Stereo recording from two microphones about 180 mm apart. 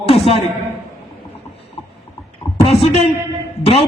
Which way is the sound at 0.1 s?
30° left (ahead or behind).